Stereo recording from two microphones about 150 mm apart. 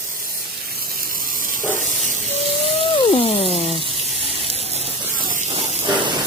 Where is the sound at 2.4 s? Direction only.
40° left (ahead or behind).